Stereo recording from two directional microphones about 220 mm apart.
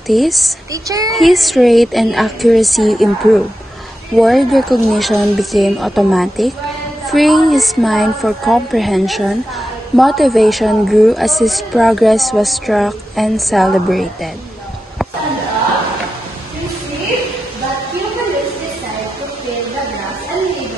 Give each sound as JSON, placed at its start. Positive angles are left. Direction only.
{"t": 0.1, "sound": "a woman's voice", "side_deg": 0}
{"t": 0.8, "sound": "a child's voice", "side_deg": -15}
{"t": 1.1, "sound": "a woman's voice", "side_deg": 0}